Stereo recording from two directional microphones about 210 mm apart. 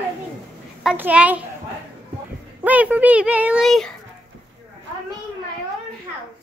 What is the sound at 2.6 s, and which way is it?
Speech, 5° right (ahead or behind).